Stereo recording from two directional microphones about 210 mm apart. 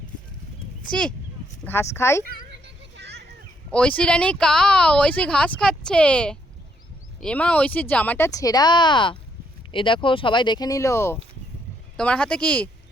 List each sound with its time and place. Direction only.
0.9 s speech: 5° left (ahead or behind)
2.2 s a sound: 55° right (ahead or behind)
3.7 s speech: 5° left (ahead or behind)